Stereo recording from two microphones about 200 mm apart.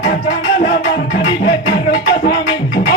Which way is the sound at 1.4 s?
55° left (ahead or behind).